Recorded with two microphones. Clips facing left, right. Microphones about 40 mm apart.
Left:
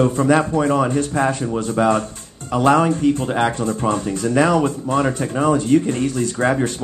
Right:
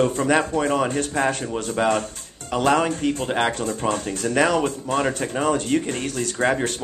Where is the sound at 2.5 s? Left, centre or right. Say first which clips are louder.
Left 4 dB; right.